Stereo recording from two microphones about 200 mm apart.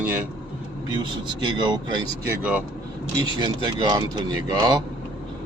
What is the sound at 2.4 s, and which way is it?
Speech, 5° right (ahead or behind).